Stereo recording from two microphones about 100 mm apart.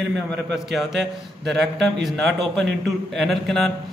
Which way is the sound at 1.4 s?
Centre (ahead or behind).